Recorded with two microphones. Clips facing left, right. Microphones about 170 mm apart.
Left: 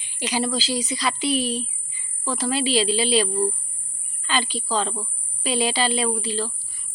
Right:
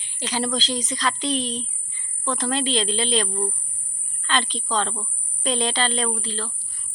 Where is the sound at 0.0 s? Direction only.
10° left (ahead or behind).